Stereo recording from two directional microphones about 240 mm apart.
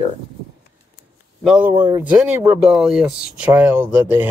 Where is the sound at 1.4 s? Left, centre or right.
Centre.